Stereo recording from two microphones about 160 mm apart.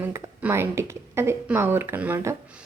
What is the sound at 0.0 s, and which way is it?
A woman's voice, 15° right (ahead or behind).